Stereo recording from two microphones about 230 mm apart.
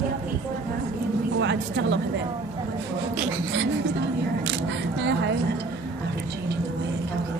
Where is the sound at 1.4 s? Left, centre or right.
Right.